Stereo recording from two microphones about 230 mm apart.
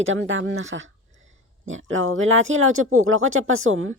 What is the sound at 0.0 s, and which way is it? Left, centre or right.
A woman's voice, right.